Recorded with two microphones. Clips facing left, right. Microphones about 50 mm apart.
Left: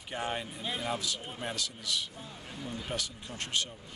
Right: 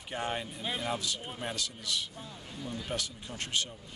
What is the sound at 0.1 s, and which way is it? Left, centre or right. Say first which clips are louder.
Speech: even; centre.